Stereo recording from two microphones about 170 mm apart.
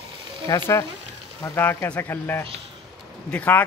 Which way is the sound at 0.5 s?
20° left (ahead or behind).